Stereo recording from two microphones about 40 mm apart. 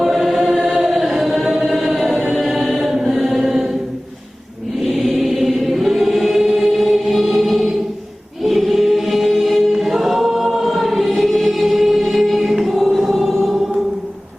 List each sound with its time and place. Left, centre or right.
0.0 s choir: centre
2.4 s music: centre
4.9 s choir: centre